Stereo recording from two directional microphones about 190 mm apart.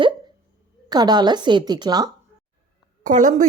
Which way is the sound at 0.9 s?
20° right (ahead or behind).